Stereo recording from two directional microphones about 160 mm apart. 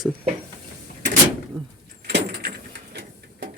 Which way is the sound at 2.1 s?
90° right.